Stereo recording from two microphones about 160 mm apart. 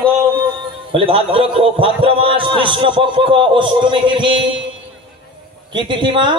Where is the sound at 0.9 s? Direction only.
35° right (ahead or behind).